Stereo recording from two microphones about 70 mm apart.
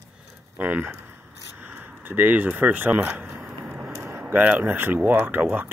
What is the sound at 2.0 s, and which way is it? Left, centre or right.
Speech, right.